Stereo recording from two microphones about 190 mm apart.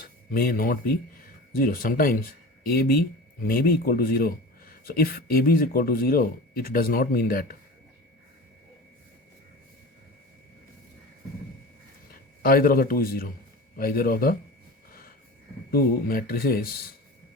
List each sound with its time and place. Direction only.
0.3 s a man's voice: 50° left (ahead or behind)
12.4 s a man's voice: 50° left (ahead or behind)
15.7 s a man's voice: 50° left (ahead or behind)